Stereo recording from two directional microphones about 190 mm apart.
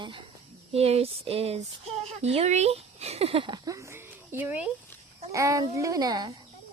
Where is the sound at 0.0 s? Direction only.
25° right (ahead or behind).